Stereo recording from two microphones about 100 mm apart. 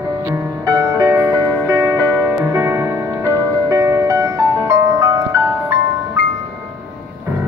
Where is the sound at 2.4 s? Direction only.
25° right (ahead or behind).